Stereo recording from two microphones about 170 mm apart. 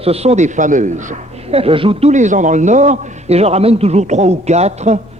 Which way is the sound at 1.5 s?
35° right (ahead or behind).